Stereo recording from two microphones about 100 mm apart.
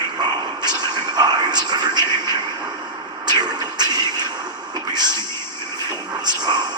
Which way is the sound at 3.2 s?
45° right (ahead or behind).